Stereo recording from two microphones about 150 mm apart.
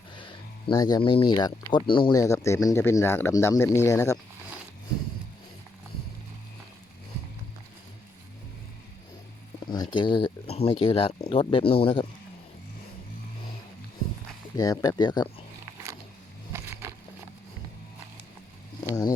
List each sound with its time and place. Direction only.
0.2 s speech: 30° left (ahead or behind)
9.6 s speech: 30° left (ahead or behind)
14.5 s speech: 25° left (ahead or behind)
16.5 s a sound: 15° right (ahead or behind)